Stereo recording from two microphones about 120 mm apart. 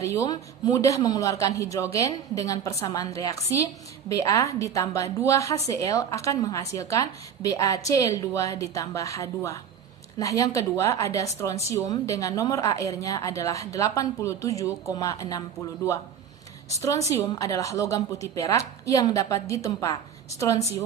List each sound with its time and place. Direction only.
0.0 s a woman's voice: 25° left (ahead or behind)
16.6 s a woman's voice: 25° left (ahead or behind)